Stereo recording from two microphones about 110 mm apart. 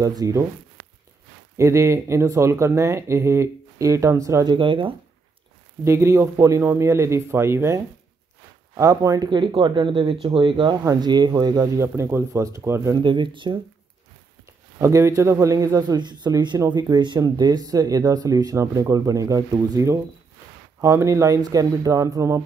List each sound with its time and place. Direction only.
0.0 s speech: 35° right (ahead or behind)
1.6 s speech: 25° right (ahead or behind)
4.5 s speech: 50° right (ahead or behind)
5.9 s speech: 25° right (ahead or behind)
9.3 s speech: 45° right (ahead or behind)
10.8 s speech: 35° right (ahead or behind)
12.9 s speech: 45° right (ahead or behind)
14.8 s speech: 30° right (ahead or behind)